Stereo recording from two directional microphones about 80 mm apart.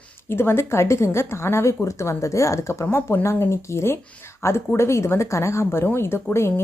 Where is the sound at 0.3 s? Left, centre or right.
Left.